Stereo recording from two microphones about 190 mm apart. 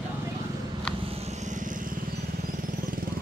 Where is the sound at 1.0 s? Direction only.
30° right (ahead or behind).